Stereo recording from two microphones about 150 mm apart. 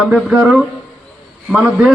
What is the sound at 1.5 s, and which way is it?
Speech, 5° right (ahead or behind).